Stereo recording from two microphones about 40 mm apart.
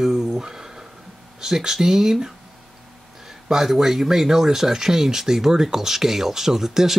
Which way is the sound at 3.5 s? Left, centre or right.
Centre.